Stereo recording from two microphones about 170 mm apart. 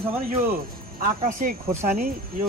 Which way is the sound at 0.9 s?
55° right (ahead or behind).